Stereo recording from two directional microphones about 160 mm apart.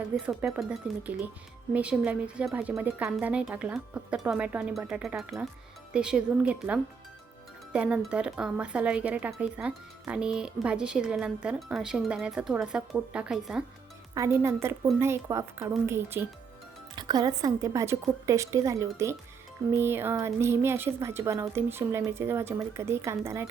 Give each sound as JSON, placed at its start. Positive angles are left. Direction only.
{"t": 0.2, "sound": "speech", "side_deg": -5}
{"t": 14.1, "sound": "speech", "side_deg": -20}
{"t": 16.9, "sound": "a woman's voice", "side_deg": -25}